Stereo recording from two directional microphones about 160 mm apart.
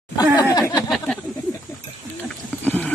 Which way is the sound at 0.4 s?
25° left (ahead or behind).